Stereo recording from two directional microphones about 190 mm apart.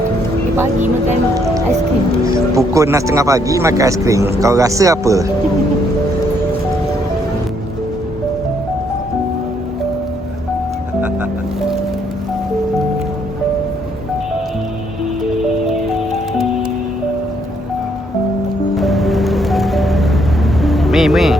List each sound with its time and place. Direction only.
2.6 s speech: 15° right (ahead or behind)
18.8 s music: centre (ahead or behind)